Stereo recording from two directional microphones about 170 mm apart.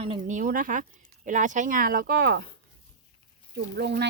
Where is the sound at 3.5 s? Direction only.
75° right (ahead or behind).